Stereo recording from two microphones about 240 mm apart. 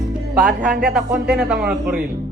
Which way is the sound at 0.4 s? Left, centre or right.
Right.